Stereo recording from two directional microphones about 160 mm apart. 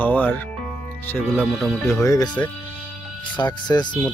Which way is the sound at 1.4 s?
Centre (ahead or behind).